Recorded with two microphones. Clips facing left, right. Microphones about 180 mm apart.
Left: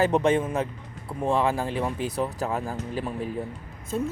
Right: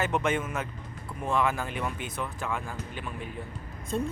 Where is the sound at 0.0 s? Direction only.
35° left (ahead or behind).